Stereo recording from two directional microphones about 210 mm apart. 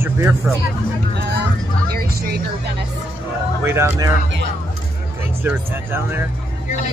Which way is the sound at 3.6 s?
10° right (ahead or behind).